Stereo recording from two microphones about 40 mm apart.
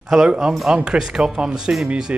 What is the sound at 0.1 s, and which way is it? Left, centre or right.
Speech, centre.